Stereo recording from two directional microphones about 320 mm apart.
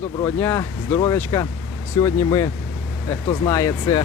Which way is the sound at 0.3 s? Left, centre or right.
Centre.